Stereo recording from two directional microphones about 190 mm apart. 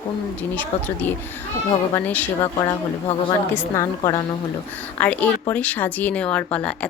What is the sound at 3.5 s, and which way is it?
Speech, 15° left (ahead or behind).